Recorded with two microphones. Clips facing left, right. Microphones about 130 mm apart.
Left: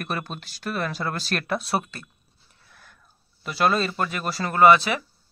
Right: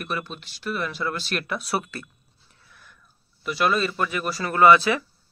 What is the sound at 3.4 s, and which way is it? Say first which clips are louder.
Speech: even; 35° left (ahead or behind).